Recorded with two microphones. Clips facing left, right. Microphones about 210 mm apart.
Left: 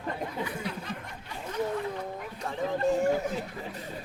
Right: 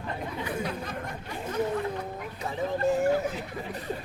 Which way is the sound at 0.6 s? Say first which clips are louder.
Right 2 dB; 45° right (ahead or behind).